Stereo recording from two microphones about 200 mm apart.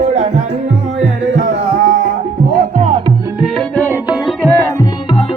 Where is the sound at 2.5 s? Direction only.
35° right (ahead or behind).